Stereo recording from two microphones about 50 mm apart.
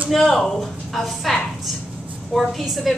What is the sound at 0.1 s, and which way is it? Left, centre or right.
A woman's voice, centre.